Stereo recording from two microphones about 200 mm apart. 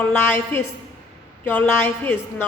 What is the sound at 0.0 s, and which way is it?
A woman's voice, 10° left (ahead or behind).